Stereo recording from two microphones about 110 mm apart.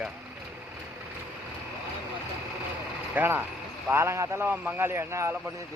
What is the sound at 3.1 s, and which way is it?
A man's voice, 20° right (ahead or behind).